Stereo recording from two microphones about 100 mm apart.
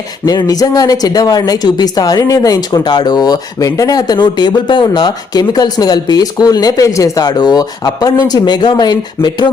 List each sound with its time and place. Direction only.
0.3 s speech: 40° left (ahead or behind)